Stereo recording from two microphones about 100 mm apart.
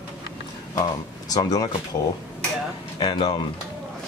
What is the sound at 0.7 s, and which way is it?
Speech, 40° left (ahead or behind).